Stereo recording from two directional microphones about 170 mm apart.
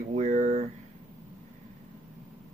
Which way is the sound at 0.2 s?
50° right (ahead or behind).